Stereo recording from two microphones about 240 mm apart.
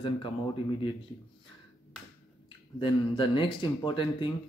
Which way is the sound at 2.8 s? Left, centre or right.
Left.